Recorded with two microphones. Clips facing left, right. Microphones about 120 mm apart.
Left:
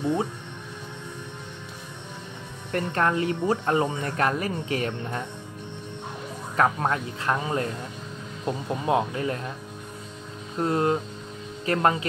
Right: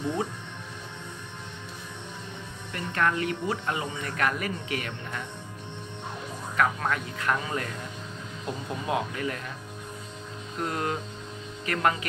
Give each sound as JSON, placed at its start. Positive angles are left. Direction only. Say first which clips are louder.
{"t": 2.7, "sound": "speech", "louder": "left 3 dB", "side_deg": 35}
{"t": 6.5, "sound": "speech", "louder": "left 3 dB", "side_deg": 30}
{"t": 10.6, "sound": "speech", "louder": "left 7 dB", "side_deg": 30}